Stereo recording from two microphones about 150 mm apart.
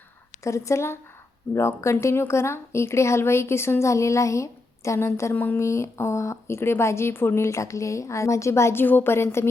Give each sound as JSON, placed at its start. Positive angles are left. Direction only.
{"t": 0.4, "sound": "speech", "side_deg": 20}